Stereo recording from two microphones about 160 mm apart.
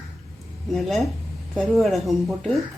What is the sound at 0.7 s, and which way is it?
Speech, centre (ahead or behind).